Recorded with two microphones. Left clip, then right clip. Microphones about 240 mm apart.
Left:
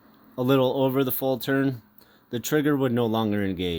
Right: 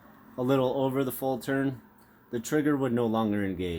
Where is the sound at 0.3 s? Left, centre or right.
Left.